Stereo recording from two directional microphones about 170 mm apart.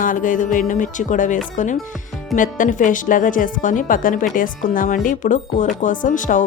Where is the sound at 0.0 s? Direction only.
50° left (ahead or behind).